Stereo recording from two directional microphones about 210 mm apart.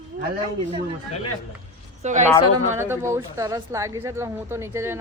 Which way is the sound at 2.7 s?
10° right (ahead or behind).